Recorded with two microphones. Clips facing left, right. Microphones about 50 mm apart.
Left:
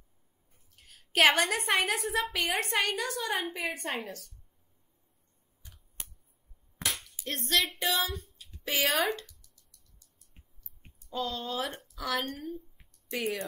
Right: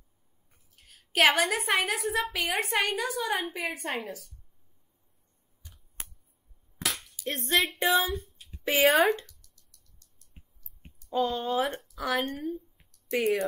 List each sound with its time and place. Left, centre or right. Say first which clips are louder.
0.7 s a woman's voice: right 1 dB; centre
7.4 s music: right 3 dB; right
9.2 s plop: left 1 dB; centre
11.1 s music: right 6 dB; right
11.9 s a woman's voice: right 3 dB; centre
12.4 s a woman's voice: right 5 dB; centre